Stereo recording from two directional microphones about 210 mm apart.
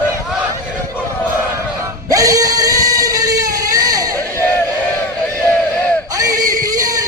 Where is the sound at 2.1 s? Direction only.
15° right (ahead or behind).